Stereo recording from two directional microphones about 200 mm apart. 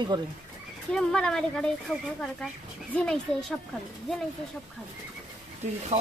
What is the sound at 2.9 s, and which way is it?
Speech, 5° left (ahead or behind).